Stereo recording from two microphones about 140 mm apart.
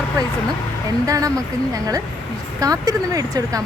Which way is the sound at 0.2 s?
25° right (ahead or behind).